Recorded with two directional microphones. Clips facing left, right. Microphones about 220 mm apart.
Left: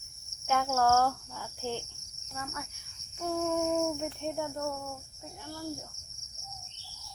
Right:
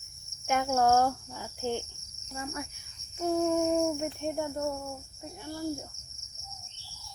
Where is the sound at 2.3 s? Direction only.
25° right (ahead or behind).